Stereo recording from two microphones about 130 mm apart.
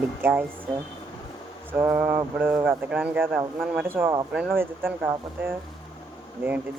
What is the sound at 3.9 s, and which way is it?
A man's voice, 20° right (ahead or behind).